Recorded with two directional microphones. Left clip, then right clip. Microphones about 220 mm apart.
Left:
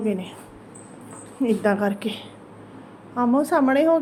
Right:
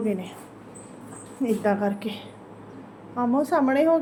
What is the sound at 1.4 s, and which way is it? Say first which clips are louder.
A woman's voice: left 2 dB; 15° left (ahead or behind).